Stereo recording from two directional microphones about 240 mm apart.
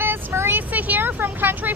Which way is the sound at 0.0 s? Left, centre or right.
Centre.